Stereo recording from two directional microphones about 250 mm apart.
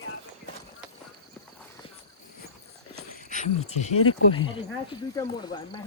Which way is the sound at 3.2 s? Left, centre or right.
Left.